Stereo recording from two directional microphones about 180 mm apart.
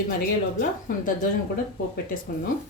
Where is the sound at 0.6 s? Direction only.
55° left (ahead or behind).